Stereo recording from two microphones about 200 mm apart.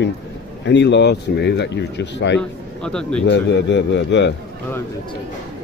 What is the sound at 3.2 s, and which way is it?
A man's voice, 60° left (ahead or behind).